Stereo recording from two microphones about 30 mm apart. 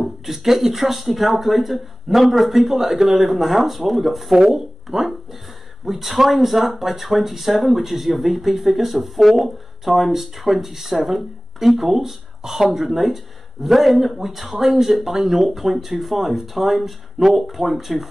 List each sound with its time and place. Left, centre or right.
0.0 s speech: centre
12.8 s speech: centre